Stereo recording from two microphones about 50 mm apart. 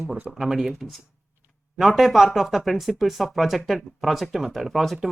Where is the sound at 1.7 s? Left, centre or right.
Centre.